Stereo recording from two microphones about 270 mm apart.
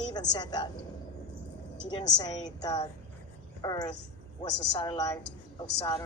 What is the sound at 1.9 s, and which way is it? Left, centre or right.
Speech, centre.